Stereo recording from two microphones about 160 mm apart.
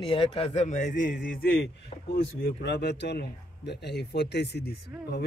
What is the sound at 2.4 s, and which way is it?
Speech, 90° left.